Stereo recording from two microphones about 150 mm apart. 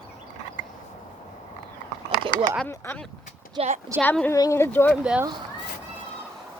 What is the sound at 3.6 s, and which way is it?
Speech, 40° right (ahead or behind).